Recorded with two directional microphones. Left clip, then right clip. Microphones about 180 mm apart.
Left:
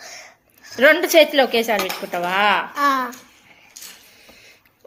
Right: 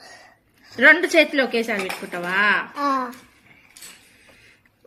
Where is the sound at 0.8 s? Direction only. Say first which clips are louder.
Left 1 dB; 15° right (ahead or behind).